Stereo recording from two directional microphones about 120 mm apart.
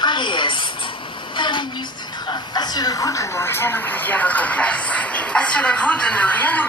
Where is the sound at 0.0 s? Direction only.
40° left (ahead or behind).